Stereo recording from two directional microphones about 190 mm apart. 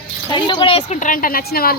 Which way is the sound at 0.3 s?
25° left (ahead or behind).